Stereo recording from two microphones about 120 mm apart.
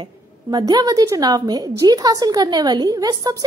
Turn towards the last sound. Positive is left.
turn(degrees=-30)  # may be behind; listen again after turning